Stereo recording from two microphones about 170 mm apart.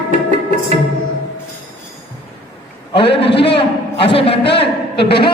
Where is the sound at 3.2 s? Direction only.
80° left.